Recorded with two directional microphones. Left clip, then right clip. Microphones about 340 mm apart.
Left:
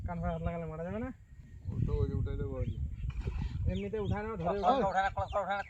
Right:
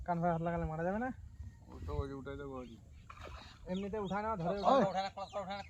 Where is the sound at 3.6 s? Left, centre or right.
Right.